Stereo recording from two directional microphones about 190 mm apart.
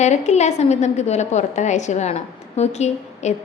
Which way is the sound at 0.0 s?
35° left (ahead or behind).